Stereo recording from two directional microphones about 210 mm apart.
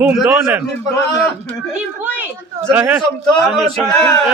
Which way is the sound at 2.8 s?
10° right (ahead or behind).